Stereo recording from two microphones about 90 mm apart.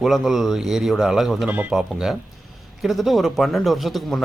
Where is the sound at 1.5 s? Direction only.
20° right (ahead or behind).